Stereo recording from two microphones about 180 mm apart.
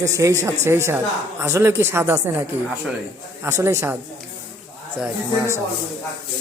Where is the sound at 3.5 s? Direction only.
15° right (ahead or behind).